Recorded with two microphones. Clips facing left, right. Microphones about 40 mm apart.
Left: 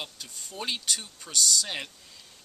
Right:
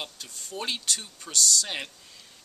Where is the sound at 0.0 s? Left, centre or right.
Centre.